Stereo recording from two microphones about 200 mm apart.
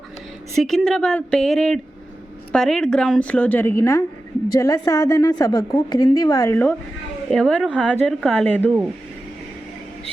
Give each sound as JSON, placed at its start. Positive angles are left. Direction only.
{"t": 0.5, "sound": "a woman's voice", "side_deg": 0}